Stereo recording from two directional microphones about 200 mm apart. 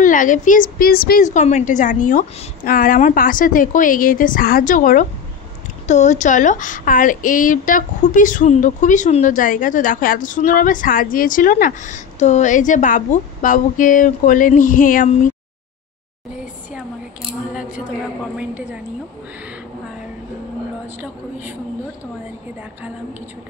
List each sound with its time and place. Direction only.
0.0 s a woman's voice: 40° left (ahead or behind)
18.4 s a woman's voice: 5° right (ahead or behind)